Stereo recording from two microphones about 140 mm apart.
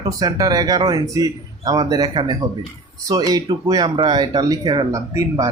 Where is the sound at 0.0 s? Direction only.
25° right (ahead or behind).